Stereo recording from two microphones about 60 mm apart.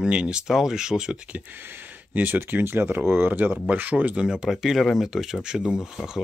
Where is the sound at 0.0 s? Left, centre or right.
Centre.